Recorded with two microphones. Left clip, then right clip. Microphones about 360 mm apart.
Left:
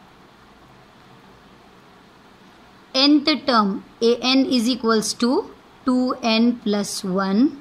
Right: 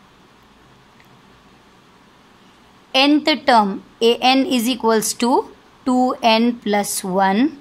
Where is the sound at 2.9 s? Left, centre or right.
Centre.